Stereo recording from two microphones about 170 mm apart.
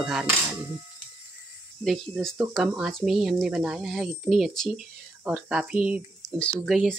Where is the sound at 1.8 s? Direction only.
Centre (ahead or behind).